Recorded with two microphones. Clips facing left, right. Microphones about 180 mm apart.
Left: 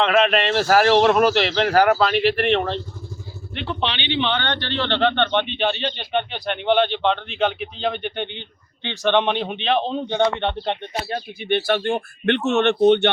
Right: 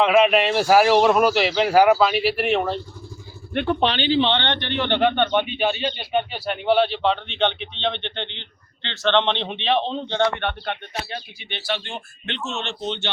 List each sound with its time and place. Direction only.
0.0 s a man's voice: 10° right (ahead or behind)
3.5 s speech: 50° right (ahead or behind); by 10.8 s 20° left (ahead or behind)
11.1 s speech: 55° left (ahead or behind)